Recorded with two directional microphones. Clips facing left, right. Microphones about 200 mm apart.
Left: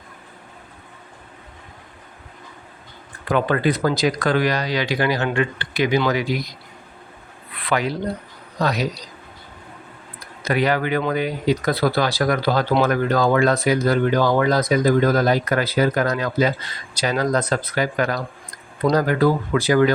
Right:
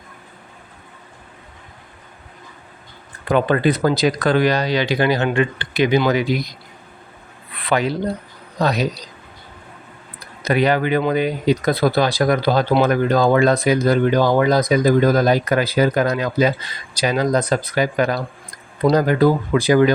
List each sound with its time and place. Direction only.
3.2 s speech: 25° right (ahead or behind)
7.7 s speech: 25° right (ahead or behind)
10.4 s speech: 20° right (ahead or behind)